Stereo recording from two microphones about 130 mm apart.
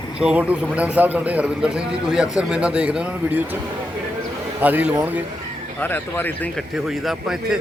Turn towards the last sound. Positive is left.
turn(degrees=-5)  # may be behind; listen again after turning